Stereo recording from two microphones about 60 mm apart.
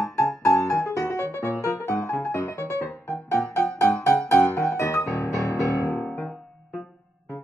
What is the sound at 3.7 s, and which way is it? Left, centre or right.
Music, left.